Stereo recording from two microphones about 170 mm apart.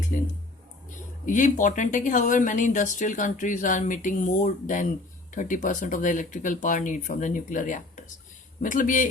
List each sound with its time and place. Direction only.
0.1 s music: 55° left (ahead or behind)
1.2 s speech: 50° left (ahead or behind)